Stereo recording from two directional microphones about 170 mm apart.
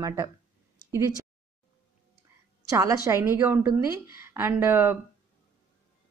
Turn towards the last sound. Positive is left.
turn(degrees=-15)  # may be behind; listen again after turning